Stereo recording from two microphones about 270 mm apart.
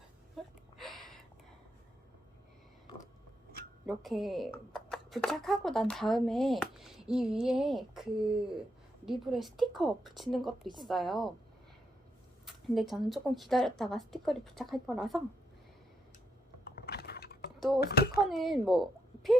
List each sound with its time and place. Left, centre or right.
0.4 s gasp: centre
0.8 s a sound: centre
3.8 s speech: centre
12.5 s speech: centre
16.6 s a sound: left
17.7 s a child's voice: left
18.2 s speech: centre